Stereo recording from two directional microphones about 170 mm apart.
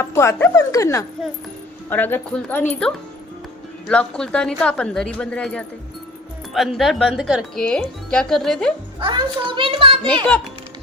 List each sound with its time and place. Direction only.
0.0 s speech: 15° left (ahead or behind)
9.0 s a child's voice: 30° right (ahead or behind)